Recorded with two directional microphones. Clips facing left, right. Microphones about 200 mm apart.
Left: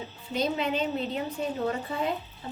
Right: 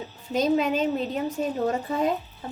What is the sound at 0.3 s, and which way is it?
A woman's voice, 45° right (ahead or behind).